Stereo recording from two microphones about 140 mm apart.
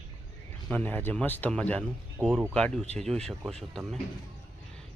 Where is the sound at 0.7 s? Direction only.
10° left (ahead or behind).